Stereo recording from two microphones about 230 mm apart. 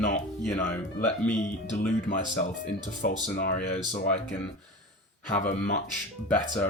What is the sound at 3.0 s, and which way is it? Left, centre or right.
Speech, left.